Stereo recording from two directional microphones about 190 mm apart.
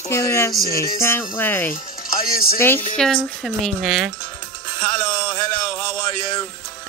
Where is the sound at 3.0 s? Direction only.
Centre (ahead or behind).